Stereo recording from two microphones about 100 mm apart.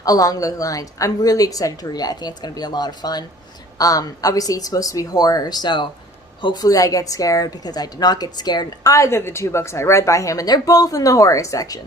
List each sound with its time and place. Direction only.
0.0 s a woman's voice: 35° left (ahead or behind)